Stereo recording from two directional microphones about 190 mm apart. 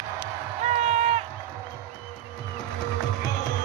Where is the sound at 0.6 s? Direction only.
35° right (ahead or behind).